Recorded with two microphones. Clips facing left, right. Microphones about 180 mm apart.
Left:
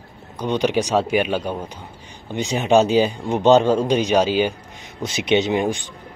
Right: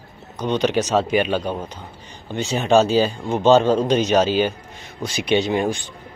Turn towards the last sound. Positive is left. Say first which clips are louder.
# left 1 dB
turn(degrees=15)  # may be behind; listen again after turning